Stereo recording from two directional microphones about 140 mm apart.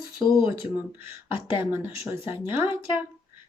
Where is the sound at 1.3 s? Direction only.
15° right (ahead or behind).